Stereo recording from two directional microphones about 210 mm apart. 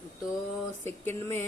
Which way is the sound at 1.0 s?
10° left (ahead or behind).